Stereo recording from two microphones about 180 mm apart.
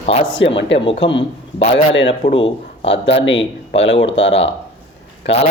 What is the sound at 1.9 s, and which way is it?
Speech, 85° left.